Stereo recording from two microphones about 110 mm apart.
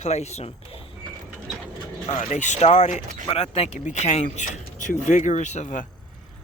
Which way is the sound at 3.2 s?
65° left (ahead or behind).